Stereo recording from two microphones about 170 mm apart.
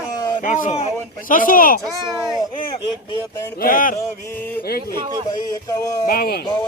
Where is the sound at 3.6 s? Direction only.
55° left (ahead or behind).